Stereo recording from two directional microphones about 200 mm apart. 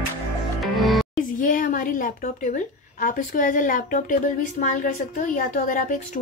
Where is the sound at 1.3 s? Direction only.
45° left (ahead or behind).